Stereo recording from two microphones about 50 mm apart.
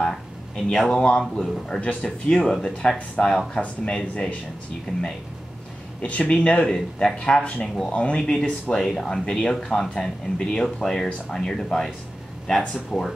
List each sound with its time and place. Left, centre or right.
0.0 s speech: centre
1.8 s speech: left
2.0 s speech: centre
3.6 s speech: left
5.9 s speech: left
8.2 s speech: centre